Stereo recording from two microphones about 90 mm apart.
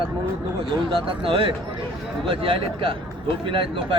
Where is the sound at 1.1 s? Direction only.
85° right.